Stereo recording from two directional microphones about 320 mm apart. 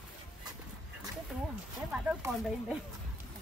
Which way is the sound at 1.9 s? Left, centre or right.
Centre.